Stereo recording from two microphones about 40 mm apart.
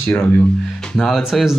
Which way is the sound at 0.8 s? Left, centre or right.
Centre.